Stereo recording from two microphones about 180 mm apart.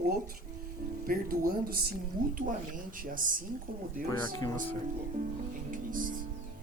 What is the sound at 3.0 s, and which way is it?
Speech, 50° right (ahead or behind).